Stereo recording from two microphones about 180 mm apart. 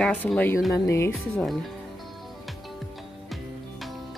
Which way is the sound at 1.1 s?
Centre (ahead or behind).